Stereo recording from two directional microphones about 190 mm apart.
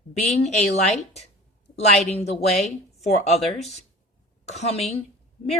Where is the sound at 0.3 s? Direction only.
35° left (ahead or behind).